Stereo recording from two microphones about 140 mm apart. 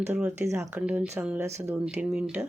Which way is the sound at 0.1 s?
10° right (ahead or behind).